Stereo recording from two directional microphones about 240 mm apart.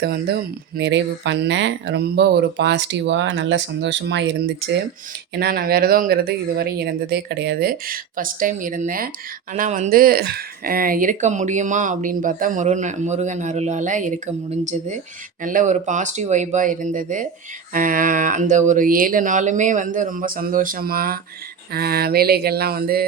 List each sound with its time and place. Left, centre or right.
0.0 s speech: right